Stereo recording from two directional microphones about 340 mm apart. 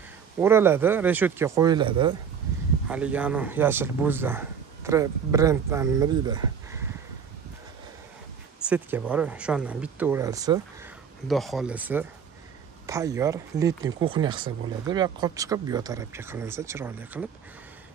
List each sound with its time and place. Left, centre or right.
0.4 s speech: centre
8.6 s speech: centre
11.2 s speech: centre